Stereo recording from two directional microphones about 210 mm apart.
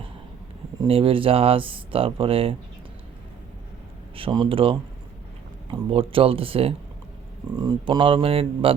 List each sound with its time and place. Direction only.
0.8 s speech: 25° right (ahead or behind)
4.1 s speech: 25° right (ahead or behind)
5.9 s speech: 25° right (ahead or behind)